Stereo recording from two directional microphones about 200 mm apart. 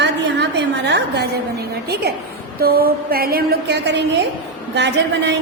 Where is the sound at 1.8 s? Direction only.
55° right (ahead or behind).